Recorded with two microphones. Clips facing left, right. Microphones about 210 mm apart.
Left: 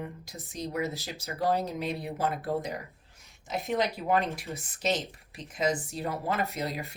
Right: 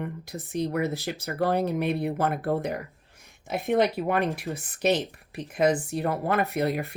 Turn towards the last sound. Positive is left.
turn(degrees=-60)  # may be behind; listen again after turning